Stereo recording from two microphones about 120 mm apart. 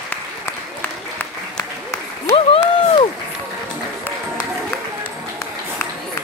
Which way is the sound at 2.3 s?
50° left (ahead or behind).